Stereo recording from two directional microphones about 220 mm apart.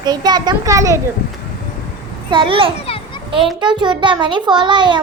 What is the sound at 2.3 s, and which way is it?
A child's voice, 25° right (ahead or behind).